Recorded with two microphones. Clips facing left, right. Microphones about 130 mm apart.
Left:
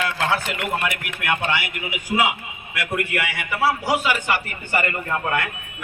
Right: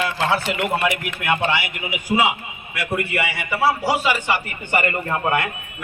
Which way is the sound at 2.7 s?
Centre (ahead or behind).